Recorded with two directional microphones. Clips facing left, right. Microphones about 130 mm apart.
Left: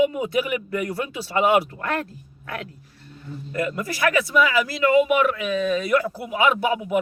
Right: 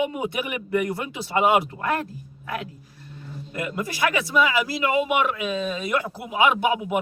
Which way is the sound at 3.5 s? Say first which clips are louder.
Left 3 dB; 20° right (ahead or behind).